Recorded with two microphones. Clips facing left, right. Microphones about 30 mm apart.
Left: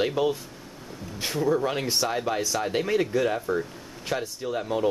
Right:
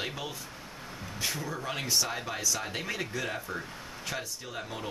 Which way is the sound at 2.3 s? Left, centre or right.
Left.